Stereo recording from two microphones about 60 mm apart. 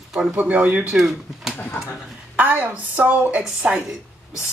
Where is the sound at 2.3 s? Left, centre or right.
Right.